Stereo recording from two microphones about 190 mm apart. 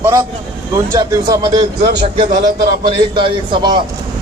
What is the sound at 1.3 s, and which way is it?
Speech, 20° right (ahead or behind).